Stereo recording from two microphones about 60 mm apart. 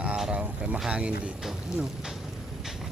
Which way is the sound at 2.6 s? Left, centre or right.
Centre.